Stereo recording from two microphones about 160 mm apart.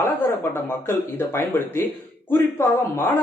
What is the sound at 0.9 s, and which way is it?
A man's voice, 15° left (ahead or behind).